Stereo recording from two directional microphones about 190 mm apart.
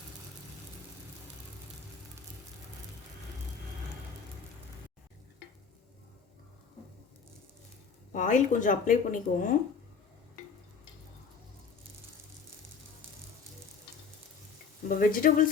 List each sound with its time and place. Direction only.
5.4 s stir: 60° left (ahead or behind)
8.1 s speech: 40° left (ahead or behind)
14.8 s speech: 45° left (ahead or behind)